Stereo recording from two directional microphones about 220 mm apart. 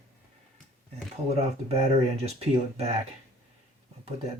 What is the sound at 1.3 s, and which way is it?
Speech, 30° right (ahead or behind).